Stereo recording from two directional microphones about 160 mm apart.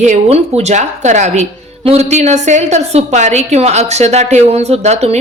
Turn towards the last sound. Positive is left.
turn(degrees=-45)  # may be behind; listen again after turning